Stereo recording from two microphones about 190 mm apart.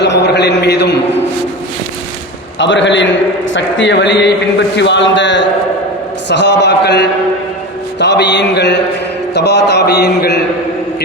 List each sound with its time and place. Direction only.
0.0 s a man's voice: 65° left (ahead or behind)
2.6 s a man's voice: 75° left (ahead or behind)